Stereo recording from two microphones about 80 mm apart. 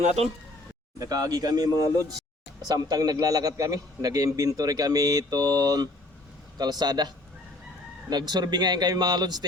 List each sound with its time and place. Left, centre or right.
0.9 s a man's voice: right
8.1 s a man's voice: right